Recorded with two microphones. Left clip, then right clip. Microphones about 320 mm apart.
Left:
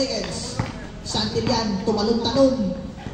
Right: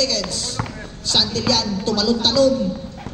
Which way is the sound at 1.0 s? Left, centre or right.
Right.